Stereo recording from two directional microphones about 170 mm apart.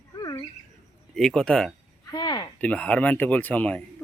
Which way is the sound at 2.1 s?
25° left (ahead or behind).